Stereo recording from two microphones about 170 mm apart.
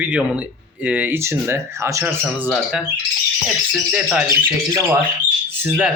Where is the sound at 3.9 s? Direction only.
5° right (ahead or behind).